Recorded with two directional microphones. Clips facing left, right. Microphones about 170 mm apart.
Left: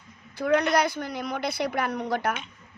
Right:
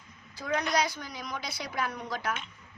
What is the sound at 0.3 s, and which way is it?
A woman's voice, 60° left (ahead or behind).